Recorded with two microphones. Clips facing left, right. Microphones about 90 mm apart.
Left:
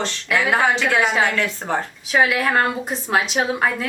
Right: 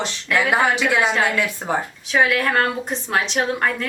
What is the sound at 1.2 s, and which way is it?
Speech, 10° right (ahead or behind).